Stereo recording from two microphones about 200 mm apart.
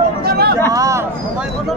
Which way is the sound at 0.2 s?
50° right (ahead or behind).